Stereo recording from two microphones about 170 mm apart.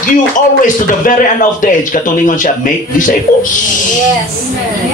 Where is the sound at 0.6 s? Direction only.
50° left (ahead or behind).